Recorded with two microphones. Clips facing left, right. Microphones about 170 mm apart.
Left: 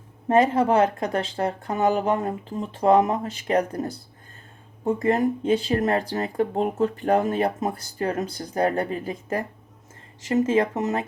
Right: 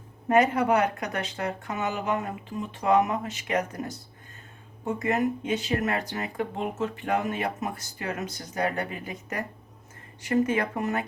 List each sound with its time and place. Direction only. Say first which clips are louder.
0.3 s speech: left 3 dB; 25° left (ahead or behind)
5.0 s speech: left 5 dB; 30° left (ahead or behind)
10.2 s speech: left 4 dB; 25° left (ahead or behind)